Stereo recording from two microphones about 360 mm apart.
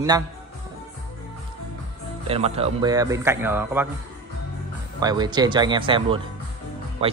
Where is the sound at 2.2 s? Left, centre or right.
Centre.